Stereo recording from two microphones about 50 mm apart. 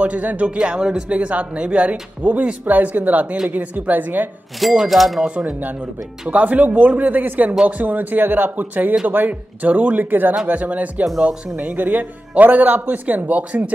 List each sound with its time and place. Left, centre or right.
0.0 s speech: right
0.6 s speech: centre; by 4.3 s right
4.8 s speech: centre
6.2 s speech: right